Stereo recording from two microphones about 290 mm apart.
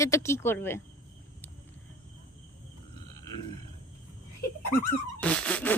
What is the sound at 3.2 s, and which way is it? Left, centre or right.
Grunt, centre.